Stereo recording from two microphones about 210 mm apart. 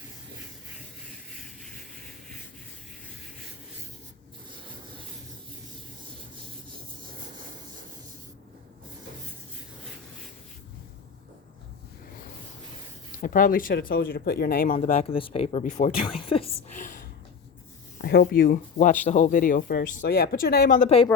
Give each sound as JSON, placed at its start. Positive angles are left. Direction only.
{"t": 7.1, "sound": "rub", "side_deg": -40}
{"t": 13.1, "sound": "speech", "side_deg": 40}
{"t": 14.8, "sound": "speech", "side_deg": 35}
{"t": 17.9, "sound": "speech", "side_deg": 55}